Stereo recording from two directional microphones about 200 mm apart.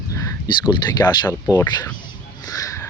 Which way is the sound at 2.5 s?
15° left (ahead or behind).